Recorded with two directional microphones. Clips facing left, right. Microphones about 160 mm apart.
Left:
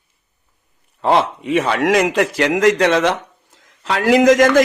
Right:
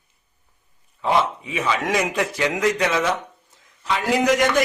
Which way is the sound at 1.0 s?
70° left (ahead or behind).